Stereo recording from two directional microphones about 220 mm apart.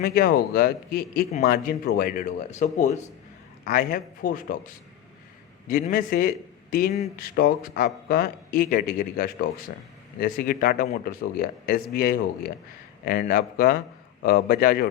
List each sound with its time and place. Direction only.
0.0 s a man's voice: 45° left (ahead or behind)